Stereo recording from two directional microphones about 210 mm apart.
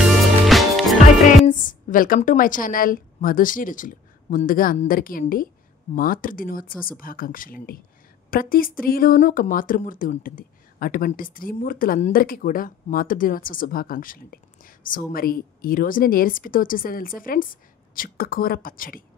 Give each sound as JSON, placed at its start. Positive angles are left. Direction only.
{"t": 0.0, "sound": "music", "side_deg": 0}
{"t": 1.4, "sound": "a woman's voice", "side_deg": 40}